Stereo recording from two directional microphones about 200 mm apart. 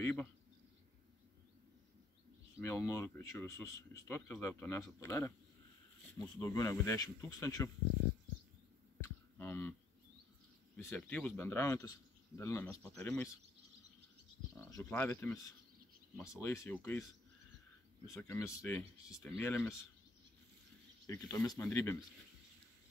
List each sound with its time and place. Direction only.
0.0 s speech: 10° left (ahead or behind)
2.5 s speech: 15° left (ahead or behind)
9.0 s a sound: 10° left (ahead or behind)
10.8 s speech: 10° left (ahead or behind)
14.6 s speech: 15° left (ahead or behind)
16.3 s speech: 10° left (ahead or behind)
18.2 s speech: 15° left (ahead or behind)
21.1 s speech: 15° left (ahead or behind)